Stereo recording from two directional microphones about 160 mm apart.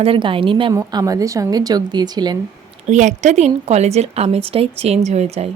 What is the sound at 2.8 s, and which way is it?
A woman's voice, 50° right (ahead or behind).